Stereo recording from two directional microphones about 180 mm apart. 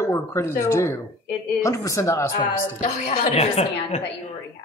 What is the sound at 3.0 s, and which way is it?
Speech, 35° left (ahead or behind).